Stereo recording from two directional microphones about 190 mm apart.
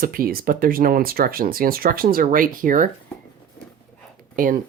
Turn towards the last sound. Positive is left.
turn(degrees=-45)  # may be behind; listen again after turning